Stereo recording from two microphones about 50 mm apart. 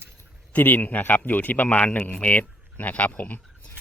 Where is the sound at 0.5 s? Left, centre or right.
Left.